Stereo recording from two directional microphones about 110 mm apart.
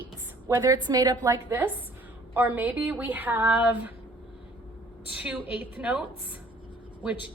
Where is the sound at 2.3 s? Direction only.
15° right (ahead or behind).